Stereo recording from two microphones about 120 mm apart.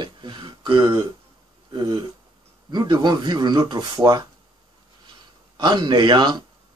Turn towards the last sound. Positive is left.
turn(degrees=-40)  # may be behind; listen again after turning